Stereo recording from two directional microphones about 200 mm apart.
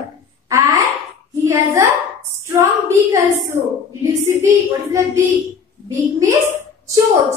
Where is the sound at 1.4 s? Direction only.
15° right (ahead or behind).